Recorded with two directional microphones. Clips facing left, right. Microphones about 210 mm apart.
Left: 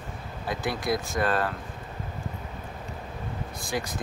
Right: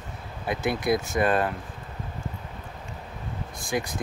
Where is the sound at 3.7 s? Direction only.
15° right (ahead or behind).